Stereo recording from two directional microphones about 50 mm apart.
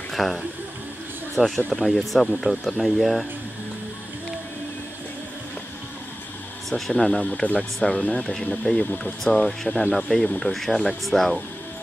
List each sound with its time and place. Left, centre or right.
0.1 s speech: centre
6.7 s speech: centre
7.4 s speech: left
7.8 s speech: centre